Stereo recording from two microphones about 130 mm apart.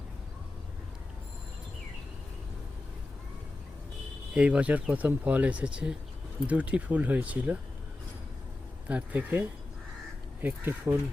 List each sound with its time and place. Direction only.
4.4 s speech: 10° right (ahead or behind)
8.9 s speech: 10° right (ahead or behind)